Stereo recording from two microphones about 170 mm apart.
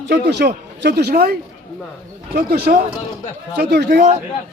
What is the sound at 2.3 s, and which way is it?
A man's voice, 70° right (ahead or behind).